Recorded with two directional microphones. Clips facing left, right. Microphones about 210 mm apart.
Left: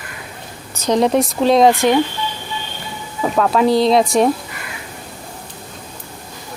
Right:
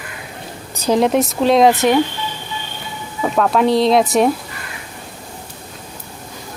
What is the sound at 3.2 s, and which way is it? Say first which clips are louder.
Speech: even; centre (ahead or behind).